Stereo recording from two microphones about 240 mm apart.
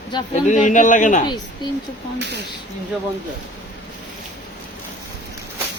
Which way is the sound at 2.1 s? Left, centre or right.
Right.